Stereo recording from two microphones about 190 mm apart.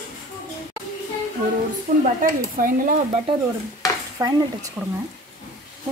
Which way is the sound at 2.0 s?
45° right (ahead or behind).